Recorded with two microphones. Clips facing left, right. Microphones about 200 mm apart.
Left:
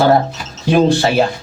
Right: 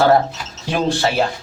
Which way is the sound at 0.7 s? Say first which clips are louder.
Left 6 dB; 15° left (ahead or behind).